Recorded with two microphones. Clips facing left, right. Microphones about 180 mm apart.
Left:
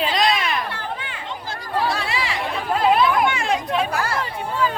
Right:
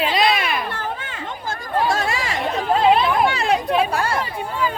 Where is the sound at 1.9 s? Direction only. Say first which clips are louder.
Right 3 dB; 45° right (ahead or behind).